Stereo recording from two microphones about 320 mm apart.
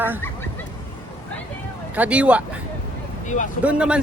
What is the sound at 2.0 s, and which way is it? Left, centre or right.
Speech, centre.